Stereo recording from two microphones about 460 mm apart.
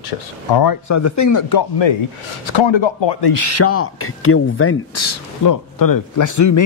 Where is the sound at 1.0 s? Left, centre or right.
Left.